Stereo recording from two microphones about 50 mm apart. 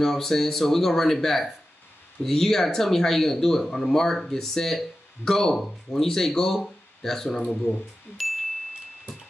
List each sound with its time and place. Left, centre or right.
0.0 s speech: centre
7.4 s speech: left